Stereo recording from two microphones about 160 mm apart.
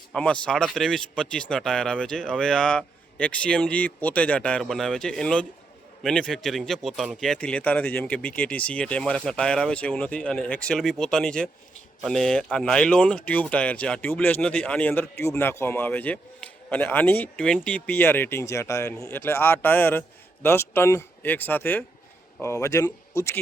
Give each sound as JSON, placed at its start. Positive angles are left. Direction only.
{"t": 0.1, "sound": "a man's voice", "side_deg": 5}